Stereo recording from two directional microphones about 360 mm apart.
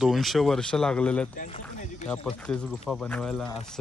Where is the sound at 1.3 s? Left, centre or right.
Left.